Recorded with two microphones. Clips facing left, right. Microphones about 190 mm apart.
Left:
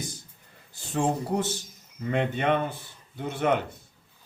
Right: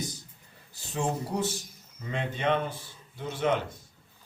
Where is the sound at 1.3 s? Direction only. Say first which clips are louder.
Left 3 dB; 55° left (ahead or behind).